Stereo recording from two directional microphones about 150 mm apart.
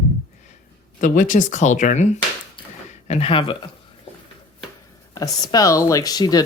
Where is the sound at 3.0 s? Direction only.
40° left (ahead or behind).